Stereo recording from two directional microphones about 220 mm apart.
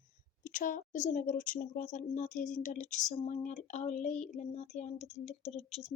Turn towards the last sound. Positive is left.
turn(degrees=30)  # may be behind; listen again after turning